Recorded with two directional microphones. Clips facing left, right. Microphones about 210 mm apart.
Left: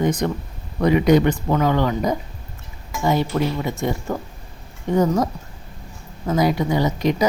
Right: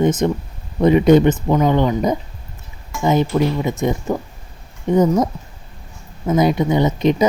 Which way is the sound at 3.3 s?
15° right (ahead or behind).